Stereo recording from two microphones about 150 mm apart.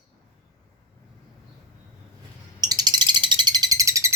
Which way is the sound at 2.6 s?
25° right (ahead or behind).